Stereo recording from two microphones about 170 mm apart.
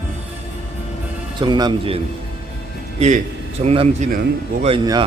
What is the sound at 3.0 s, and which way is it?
A man's voice, 45° right (ahead or behind).